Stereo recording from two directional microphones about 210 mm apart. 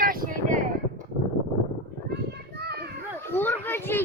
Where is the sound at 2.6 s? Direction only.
50° right (ahead or behind).